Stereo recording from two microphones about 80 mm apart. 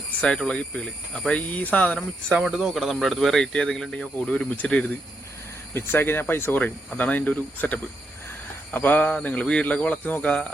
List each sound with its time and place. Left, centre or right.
0.2 s a man's voice: centre
2.3 s a man's voice: centre
5.7 s a man's voice: left